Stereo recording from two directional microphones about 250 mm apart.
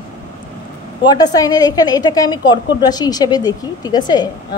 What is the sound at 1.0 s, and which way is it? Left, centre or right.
A woman's voice, centre.